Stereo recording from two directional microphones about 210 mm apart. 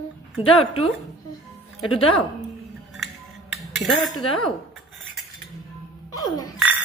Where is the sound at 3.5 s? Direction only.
Centre (ahead or behind).